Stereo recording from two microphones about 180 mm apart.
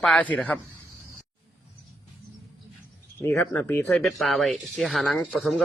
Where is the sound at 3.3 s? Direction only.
10° left (ahead or behind).